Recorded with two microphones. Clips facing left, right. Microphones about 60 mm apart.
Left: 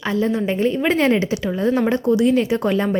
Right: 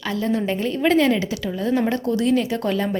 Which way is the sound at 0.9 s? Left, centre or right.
Left.